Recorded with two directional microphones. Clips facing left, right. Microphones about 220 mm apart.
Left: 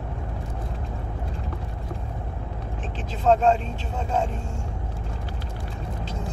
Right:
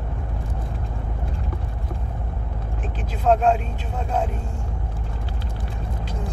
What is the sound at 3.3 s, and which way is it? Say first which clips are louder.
Speech: right 1 dB; 10° right (ahead or behind).